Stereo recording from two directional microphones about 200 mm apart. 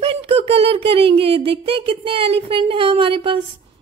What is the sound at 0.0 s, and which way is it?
Speech, 30° right (ahead or behind).